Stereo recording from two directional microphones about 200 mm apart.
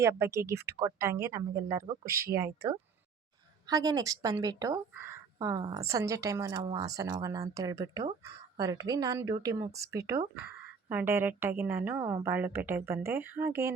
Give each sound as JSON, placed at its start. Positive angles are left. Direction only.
{"t": 0.0, "sound": "speech", "side_deg": -15}
{"t": 1.8, "sound": "speech", "side_deg": -50}
{"t": 2.2, "sound": "speech", "side_deg": -15}
{"t": 3.7, "sound": "speech", "side_deg": -20}